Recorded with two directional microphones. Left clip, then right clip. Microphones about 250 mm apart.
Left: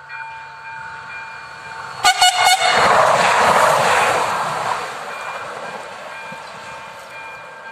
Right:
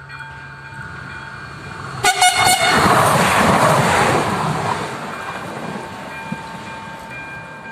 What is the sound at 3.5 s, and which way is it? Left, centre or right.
Waves, centre.